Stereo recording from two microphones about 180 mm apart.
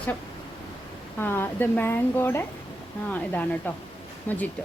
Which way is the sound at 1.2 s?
10° left (ahead or behind).